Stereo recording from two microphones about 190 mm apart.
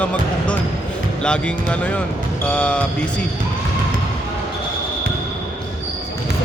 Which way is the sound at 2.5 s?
5° left (ahead or behind).